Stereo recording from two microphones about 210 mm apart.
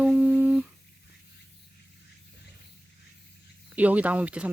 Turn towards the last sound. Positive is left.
turn(degrees=-5)  # may be behind; listen again after turning